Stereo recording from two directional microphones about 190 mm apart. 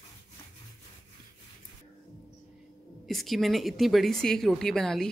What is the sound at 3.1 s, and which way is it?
A woman's voice, centre (ahead or behind).